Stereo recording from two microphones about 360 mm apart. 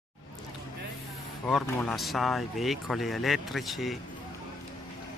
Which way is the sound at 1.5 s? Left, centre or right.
Centre.